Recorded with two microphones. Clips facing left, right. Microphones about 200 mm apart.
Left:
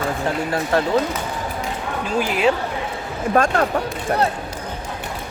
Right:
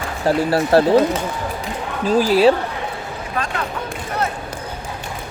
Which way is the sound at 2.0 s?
35° right (ahead or behind).